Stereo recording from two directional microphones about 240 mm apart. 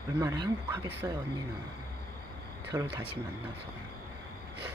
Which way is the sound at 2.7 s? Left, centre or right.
Centre.